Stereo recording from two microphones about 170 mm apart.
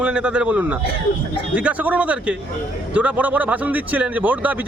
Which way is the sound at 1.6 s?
10° right (ahead or behind).